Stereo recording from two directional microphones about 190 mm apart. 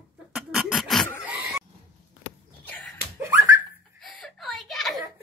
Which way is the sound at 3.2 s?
15° right (ahead or behind).